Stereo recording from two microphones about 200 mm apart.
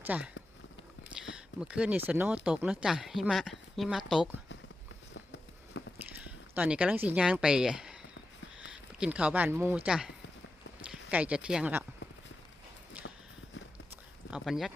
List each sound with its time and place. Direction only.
0.0 s speech: 10° right (ahead or behind)
1.5 s speech: 5° right (ahead or behind)
5.1 s run: 65° left (ahead or behind)
6.2 s speech: 10° right (ahead or behind)
11.1 s speech: 5° right (ahead or behind)
13.0 s walk: 5° right (ahead or behind)
13.9 s a sound: 5° right (ahead or behind)